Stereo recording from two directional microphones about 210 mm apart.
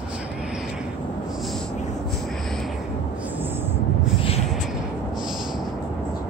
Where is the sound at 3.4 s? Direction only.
10° right (ahead or behind).